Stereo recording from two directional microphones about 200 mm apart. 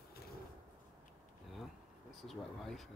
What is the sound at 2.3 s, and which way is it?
Speech, centre (ahead or behind).